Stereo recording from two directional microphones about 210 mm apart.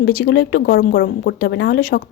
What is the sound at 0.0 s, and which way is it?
Speech, 50° left (ahead or behind).